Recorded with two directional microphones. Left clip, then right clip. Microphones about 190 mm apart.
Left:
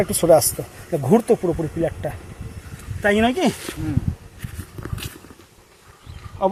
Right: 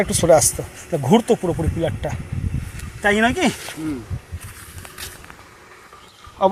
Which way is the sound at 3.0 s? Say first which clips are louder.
Right 1 dB; 20° left (ahead or behind).